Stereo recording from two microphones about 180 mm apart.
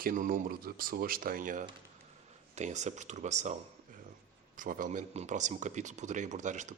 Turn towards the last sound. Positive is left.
turn(degrees=-40)  # may be behind; listen again after turning